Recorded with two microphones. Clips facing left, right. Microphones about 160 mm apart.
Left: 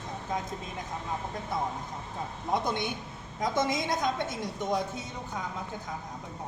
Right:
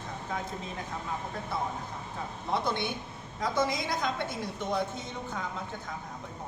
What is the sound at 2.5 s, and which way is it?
A woman's voice, 15° left (ahead or behind).